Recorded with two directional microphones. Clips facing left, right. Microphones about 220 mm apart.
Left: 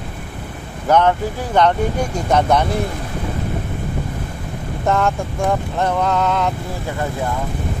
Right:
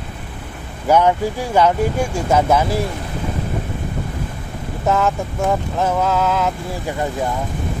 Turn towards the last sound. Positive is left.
turn(degrees=-5)  # may be behind; listen again after turning